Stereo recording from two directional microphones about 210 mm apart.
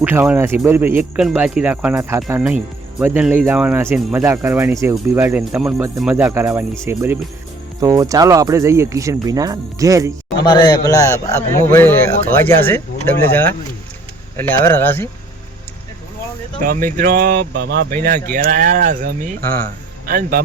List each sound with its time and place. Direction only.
0.0 s speech: 10° right (ahead or behind)
10.4 s a man's voice: 20° left (ahead or behind)
16.6 s speech: 40° right (ahead or behind)